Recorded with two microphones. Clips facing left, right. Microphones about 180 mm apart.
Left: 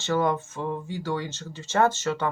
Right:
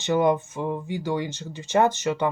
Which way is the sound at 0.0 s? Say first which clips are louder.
Right 4 dB; 15° right (ahead or behind).